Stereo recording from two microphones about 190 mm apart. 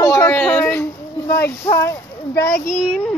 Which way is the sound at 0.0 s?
15° left (ahead or behind).